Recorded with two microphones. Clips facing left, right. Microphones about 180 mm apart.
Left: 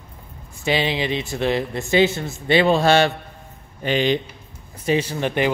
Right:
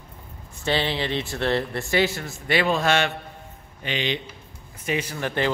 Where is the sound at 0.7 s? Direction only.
15° left (ahead or behind); by 3.1 s 30° left (ahead or behind).